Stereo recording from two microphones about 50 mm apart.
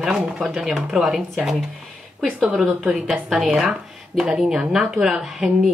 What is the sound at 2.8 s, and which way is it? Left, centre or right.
Speech, centre.